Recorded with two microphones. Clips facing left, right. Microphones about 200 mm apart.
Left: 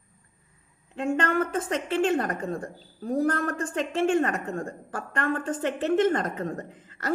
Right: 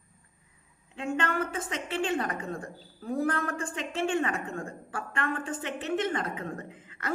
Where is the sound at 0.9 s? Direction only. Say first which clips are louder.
Left 5 dB; 45° left (ahead or behind).